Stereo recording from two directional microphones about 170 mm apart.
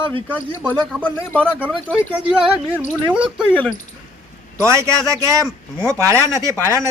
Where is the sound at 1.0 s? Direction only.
10° left (ahead or behind).